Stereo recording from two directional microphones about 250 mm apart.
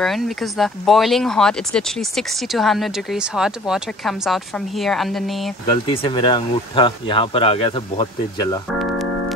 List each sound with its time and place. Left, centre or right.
0.0 s speech: centre
6.0 s speech: centre